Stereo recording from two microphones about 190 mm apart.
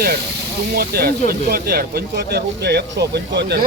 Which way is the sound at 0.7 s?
55° right (ahead or behind).